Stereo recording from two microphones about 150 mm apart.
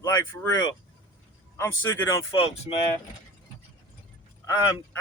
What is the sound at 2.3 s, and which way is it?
Speech, 40° left (ahead or behind).